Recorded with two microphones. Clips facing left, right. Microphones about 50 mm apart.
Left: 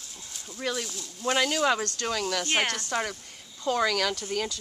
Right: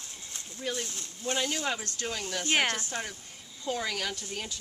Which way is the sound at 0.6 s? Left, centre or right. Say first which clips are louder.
Left 3 dB; left.